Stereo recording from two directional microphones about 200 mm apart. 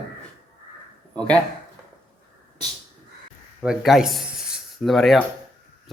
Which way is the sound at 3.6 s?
Centre (ahead or behind).